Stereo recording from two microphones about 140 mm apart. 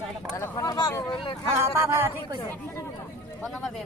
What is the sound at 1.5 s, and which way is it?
Speech, 15° right (ahead or behind).